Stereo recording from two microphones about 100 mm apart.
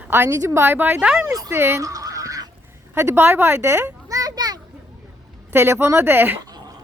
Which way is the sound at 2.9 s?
25° right (ahead or behind).